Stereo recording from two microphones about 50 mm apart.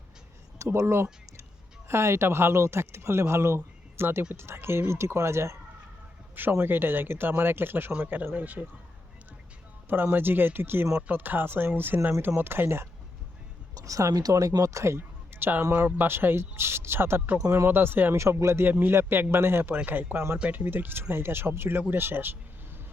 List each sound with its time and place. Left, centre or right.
0.6 s speech: right
6.5 s speech: right
7.9 s speech: right
9.9 s speech: right
13.8 s speech: right
14.9 s a sound: right
15.7 s speech: right
18.2 s speech: right
18.6 s speech: right
19.7 s speech: right